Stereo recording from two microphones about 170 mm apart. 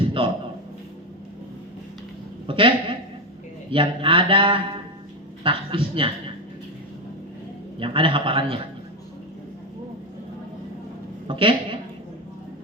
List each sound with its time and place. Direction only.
0.2 s a sound: 30° right (ahead or behind)
2.5 s a woman's voice: 30° right (ahead or behind)
7.8 s a woman's voice: 30° right (ahead or behind)
11.3 s a woman's voice: 30° right (ahead or behind)